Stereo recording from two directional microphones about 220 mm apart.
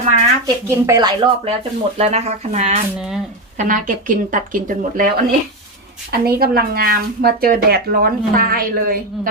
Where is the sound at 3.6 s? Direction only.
35° right (ahead or behind).